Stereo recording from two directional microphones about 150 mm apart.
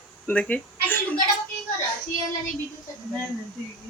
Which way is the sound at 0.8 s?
10° left (ahead or behind).